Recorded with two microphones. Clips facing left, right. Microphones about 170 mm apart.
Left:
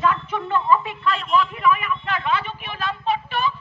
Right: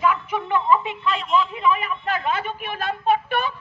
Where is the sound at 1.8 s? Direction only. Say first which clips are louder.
Right 1 dB; 40° right (ahead or behind); by 3.5 s 55° right (ahead or behind).